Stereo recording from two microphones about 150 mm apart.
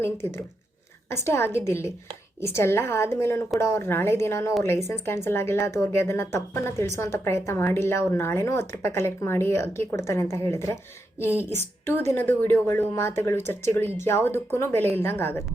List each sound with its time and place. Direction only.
1.1 s a woman's voice: 15° left (ahead or behind)